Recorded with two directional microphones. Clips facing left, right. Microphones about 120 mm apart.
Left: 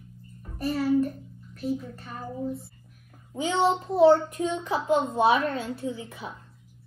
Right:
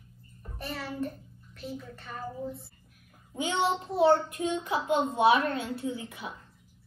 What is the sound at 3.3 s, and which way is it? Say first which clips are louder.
A child's voice: left 4 dB; 30° left (ahead or behind).